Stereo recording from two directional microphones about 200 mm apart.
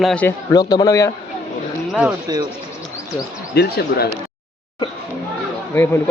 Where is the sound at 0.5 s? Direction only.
20° left (ahead or behind).